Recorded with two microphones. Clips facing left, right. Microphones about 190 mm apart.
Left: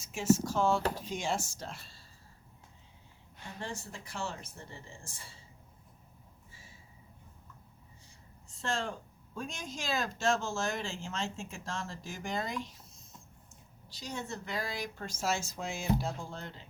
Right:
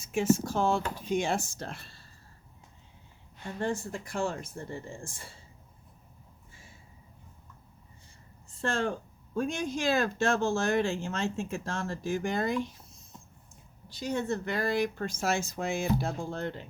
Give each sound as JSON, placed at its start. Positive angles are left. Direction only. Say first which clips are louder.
{"t": 0.0, "sound": "speech", "louder": "right 2 dB", "side_deg": -55}
{"t": 3.6, "sound": "speech", "louder": "right 10 dB", "side_deg": -55}
{"t": 8.4, "sound": "speech", "louder": "right 5 dB", "side_deg": -55}
{"t": 13.9, "sound": "speech", "louder": "right 9 dB", "side_deg": -55}